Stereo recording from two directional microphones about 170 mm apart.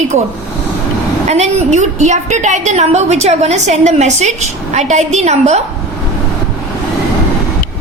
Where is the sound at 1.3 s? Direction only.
40° right (ahead or behind).